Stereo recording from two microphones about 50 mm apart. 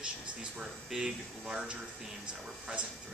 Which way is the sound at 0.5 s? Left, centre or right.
Centre.